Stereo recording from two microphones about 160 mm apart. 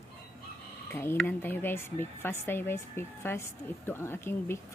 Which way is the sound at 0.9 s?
15° left (ahead or behind).